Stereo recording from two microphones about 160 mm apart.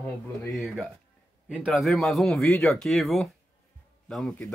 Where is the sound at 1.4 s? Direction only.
5° right (ahead or behind).